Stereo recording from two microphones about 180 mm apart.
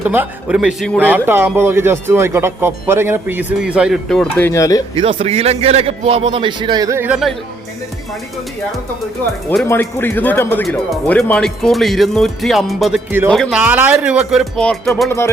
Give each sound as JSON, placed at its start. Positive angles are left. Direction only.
{"t": 0.0, "sound": "speech", "side_deg": -10}
{"t": 4.9, "sound": "a man's voice", "side_deg": -30}
{"t": 9.6, "sound": "speech", "side_deg": 10}
{"t": 13.1, "sound": "speech", "side_deg": -10}
{"t": 13.3, "sound": "speech", "side_deg": 0}